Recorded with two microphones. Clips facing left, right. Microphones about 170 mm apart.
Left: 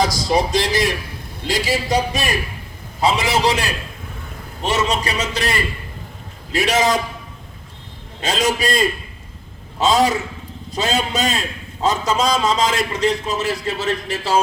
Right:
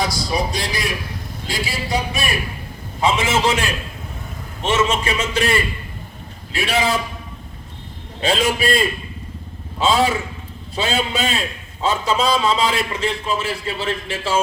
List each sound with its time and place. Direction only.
0.6 s a man's voice: 40° left (ahead or behind)
8.2 s a man's voice: 40° left (ahead or behind)